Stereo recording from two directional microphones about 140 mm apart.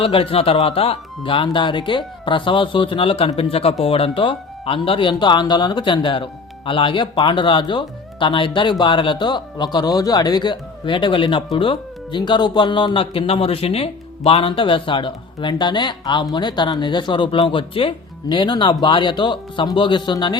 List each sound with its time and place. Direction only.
0.0 s speech: 40° left (ahead or behind)